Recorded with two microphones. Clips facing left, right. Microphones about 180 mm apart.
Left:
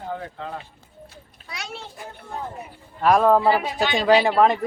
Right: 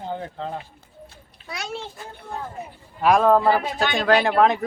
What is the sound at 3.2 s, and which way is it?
Speech, 10° left (ahead or behind).